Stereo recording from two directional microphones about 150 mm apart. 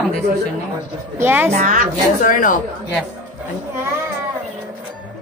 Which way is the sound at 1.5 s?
70° right (ahead or behind).